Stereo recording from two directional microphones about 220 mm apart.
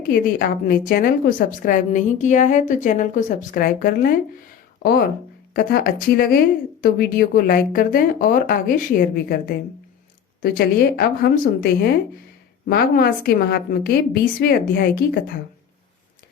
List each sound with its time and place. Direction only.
0.1 s a woman's voice: 40° left (ahead or behind)
10.4 s a woman's voice: 45° left (ahead or behind)